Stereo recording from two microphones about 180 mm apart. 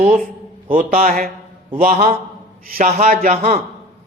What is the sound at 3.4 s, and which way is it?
Speech, 40° right (ahead or behind).